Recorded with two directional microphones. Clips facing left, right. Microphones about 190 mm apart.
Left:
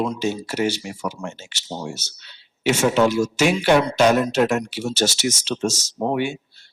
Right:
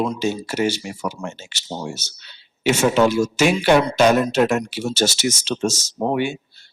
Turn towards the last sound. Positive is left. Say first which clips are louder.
# right 1 dB
turn(degrees=-10)  # may be behind; listen again after turning